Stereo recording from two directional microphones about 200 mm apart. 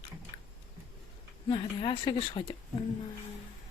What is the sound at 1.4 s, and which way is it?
A woman's voice, 25° left (ahead or behind).